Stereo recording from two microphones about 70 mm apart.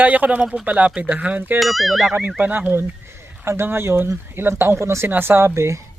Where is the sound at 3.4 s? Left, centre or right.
Right.